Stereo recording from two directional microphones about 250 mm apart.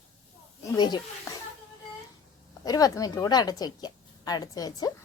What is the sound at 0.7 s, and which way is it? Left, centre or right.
Speech, centre.